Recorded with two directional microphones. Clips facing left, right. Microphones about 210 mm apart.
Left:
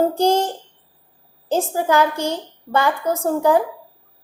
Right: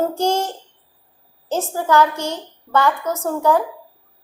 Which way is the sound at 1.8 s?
15° left (ahead or behind).